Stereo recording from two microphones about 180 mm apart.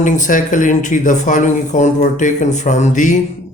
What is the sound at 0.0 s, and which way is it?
Speech, 45° left (ahead or behind).